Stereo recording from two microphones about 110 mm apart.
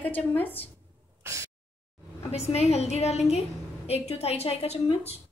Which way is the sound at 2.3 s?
70° left (ahead or behind).